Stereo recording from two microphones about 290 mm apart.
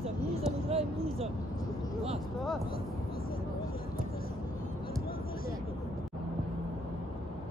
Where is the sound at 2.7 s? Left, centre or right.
Left.